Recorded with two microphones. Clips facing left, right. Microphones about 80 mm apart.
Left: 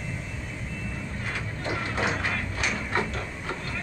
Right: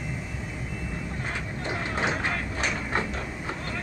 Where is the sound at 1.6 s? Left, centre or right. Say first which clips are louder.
Even; right.